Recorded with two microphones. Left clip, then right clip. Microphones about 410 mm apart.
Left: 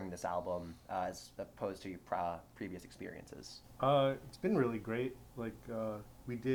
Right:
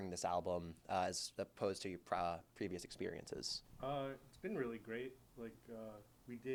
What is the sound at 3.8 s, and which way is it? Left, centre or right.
Speech, centre.